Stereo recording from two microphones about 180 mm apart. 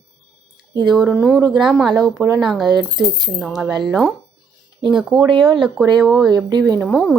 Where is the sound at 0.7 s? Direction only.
25° right (ahead or behind).